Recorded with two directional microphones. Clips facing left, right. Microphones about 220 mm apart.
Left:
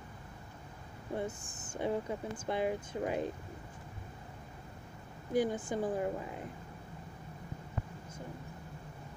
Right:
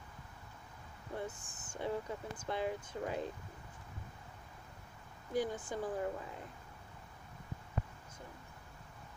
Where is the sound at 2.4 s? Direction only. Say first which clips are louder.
Left 4 dB; 15° left (ahead or behind).